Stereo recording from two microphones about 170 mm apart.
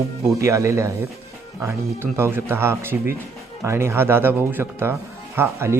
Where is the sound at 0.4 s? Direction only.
20° right (ahead or behind).